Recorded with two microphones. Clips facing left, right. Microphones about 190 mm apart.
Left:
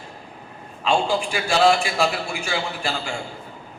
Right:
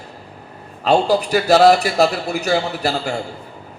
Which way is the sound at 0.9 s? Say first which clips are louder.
Right 6 dB; 40° right (ahead or behind).